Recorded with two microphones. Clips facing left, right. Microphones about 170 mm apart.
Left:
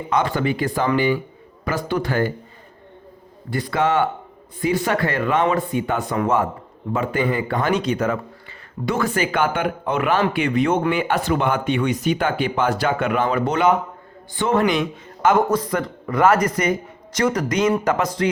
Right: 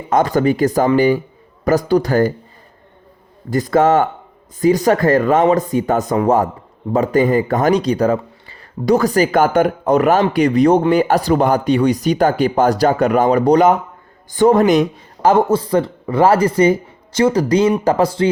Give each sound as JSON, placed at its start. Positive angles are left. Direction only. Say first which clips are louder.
{"t": 0.1, "sound": "speech", "louder": "right 7 dB", "side_deg": -40}
{"t": 3.5, "sound": "speech", "louder": "right 7 dB", "side_deg": -45}